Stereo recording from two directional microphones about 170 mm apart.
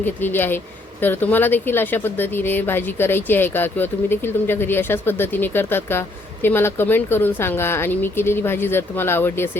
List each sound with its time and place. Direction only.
0.0 s speech: 10° left (ahead or behind)